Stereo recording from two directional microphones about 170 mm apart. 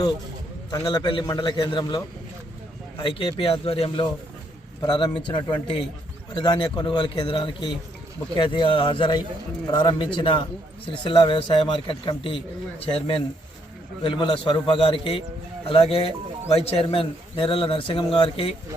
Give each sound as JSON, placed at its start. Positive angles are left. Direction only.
{"t": 0.7, "sound": "speech", "side_deg": 25}